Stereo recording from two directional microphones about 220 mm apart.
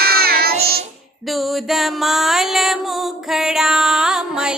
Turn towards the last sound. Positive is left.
turn(degrees=-5)  # may be behind; listen again after turning